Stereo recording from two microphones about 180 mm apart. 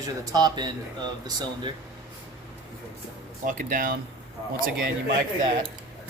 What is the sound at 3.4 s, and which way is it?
Speech, 45° right (ahead or behind).